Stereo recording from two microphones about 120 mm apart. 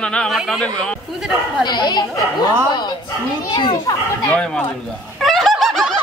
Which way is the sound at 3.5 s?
40° left (ahead or behind).